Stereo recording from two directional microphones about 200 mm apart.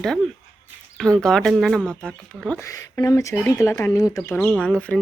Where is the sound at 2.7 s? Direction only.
15° left (ahead or behind).